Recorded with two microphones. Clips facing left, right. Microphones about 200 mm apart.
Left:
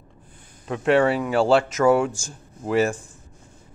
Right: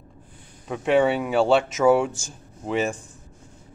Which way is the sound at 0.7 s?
Centre (ahead or behind).